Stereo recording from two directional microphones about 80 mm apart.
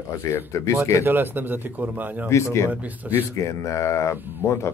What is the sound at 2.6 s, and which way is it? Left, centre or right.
Speech, centre.